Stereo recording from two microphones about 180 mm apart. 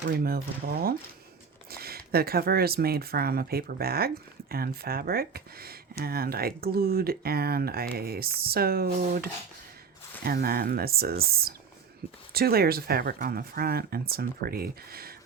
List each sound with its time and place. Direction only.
0.1 s speech: 55° right (ahead or behind)